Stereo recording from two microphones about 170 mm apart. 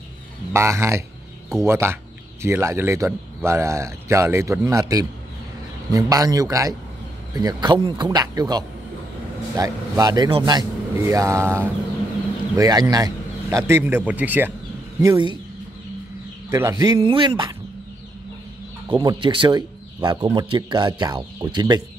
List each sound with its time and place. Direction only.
0.5 s a man's voice: 15° right (ahead or behind)
15.0 s a man's voice: 20° right (ahead or behind)
16.4 s a man's voice: 15° right (ahead or behind)
18.9 s a man's voice: 25° right (ahead or behind)